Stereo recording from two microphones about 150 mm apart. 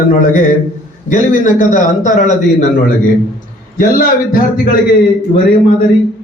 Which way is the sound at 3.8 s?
75° left (ahead or behind).